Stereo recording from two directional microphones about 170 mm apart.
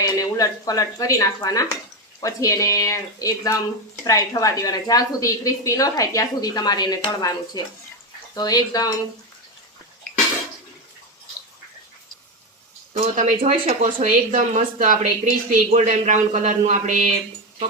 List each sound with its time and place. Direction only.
0.0 s a woman's voice: 20° left (ahead or behind)
13.0 s speech: 45° right (ahead or behind)